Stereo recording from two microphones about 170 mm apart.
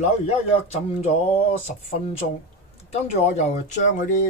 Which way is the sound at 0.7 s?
40° left (ahead or behind).